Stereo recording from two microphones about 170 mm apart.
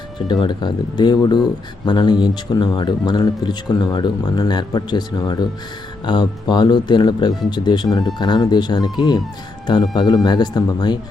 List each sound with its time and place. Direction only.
0.3 s speech: 25° left (ahead or behind)